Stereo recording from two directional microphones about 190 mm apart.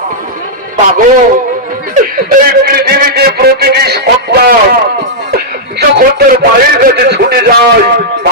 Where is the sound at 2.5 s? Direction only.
50° right (ahead or behind).